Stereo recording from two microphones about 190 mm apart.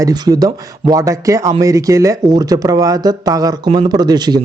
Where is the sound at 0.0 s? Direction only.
20° right (ahead or behind).